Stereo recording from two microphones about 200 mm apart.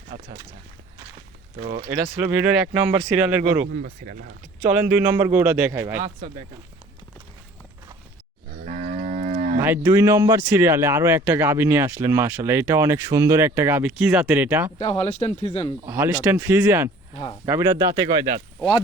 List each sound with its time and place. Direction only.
1.8 s speech: 10° right (ahead or behind)
3.6 s speech: 45° right (ahead or behind)
4.7 s speech: 10° right (ahead or behind)
8.6 s livestock: 40° right (ahead or behind)
9.6 s speech: 10° right (ahead or behind)
14.8 s speech: 35° left (ahead or behind)
15.9 s speech: 10° right (ahead or behind)